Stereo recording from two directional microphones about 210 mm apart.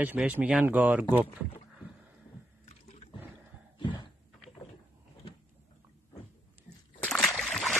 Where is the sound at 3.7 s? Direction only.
20° left (ahead or behind).